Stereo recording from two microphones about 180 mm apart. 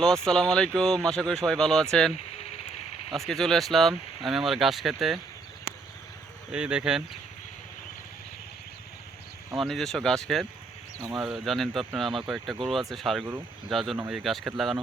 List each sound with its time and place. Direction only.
0.3 s speech: 5° left (ahead or behind)
2.4 s a sound: 35° left (ahead or behind)
3.1 s speech: centre (ahead or behind)
6.5 s speech: 5° right (ahead or behind)
9.6 s speech: centre (ahead or behind)